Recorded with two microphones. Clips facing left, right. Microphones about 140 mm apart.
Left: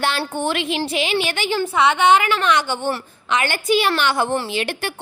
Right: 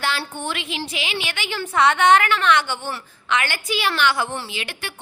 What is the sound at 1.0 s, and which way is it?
A woman's voice, 40° left (ahead or behind).